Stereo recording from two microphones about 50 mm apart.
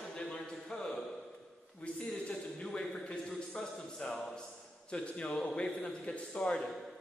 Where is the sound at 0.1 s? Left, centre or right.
Centre.